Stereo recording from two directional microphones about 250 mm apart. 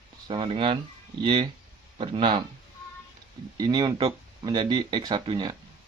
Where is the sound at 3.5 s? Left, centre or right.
Centre.